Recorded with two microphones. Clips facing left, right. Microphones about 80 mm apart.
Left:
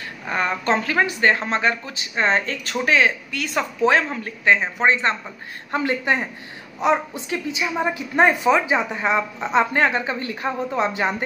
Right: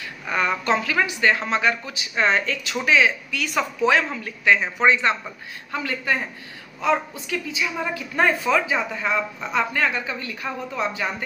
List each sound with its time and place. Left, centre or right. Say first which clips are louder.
0.3 s a woman's voice: even; left